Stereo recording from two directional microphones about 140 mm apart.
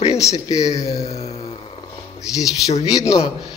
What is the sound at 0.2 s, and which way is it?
Speech, 25° left (ahead or behind).